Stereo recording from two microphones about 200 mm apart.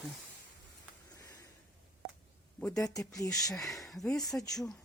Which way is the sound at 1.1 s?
15° left (ahead or behind).